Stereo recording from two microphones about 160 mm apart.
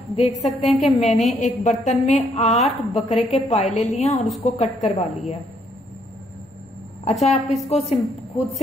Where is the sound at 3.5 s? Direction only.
45° left (ahead or behind).